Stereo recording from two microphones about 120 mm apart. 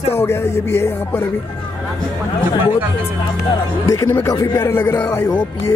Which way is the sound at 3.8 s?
20° left (ahead or behind).